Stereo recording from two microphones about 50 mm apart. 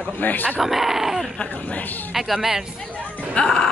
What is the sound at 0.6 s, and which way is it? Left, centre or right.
Speech, centre.